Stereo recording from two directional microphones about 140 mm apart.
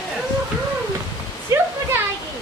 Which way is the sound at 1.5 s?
20° right (ahead or behind).